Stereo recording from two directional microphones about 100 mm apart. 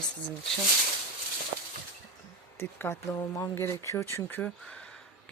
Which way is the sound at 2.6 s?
25° left (ahead or behind).